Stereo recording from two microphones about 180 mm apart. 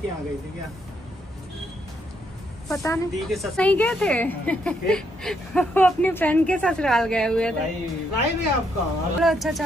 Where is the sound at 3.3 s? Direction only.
5° left (ahead or behind).